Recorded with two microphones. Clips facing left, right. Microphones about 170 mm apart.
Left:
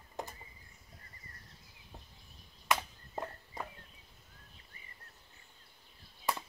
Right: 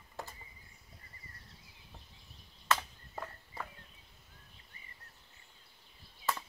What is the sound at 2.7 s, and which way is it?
Chop, 15° left (ahead or behind).